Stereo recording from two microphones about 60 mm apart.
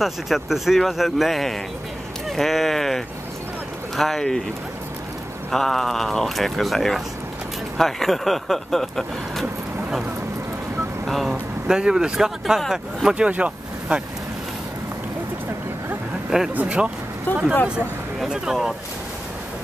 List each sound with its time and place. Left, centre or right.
0.0 s speech: centre
5.5 s speech: centre
11.1 s speech: centre
11.6 s speech: centre
13.1 s speech: centre
16.3 s speech: centre
17.3 s speech: left
18.3 s speech: centre